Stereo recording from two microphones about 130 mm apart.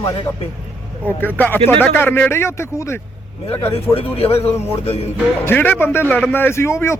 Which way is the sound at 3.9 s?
45° left (ahead or behind).